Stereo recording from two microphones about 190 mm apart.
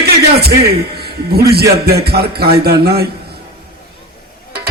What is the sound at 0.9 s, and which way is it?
A man's voice, 55° right (ahead or behind).